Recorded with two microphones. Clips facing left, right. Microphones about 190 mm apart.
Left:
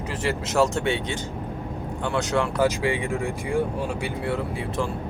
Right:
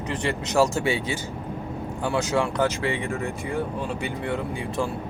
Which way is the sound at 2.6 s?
10° left (ahead or behind).